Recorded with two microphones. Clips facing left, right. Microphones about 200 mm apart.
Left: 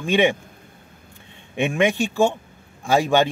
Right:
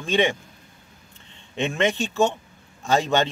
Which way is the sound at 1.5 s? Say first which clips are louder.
Left 3 dB; 15° left (ahead or behind).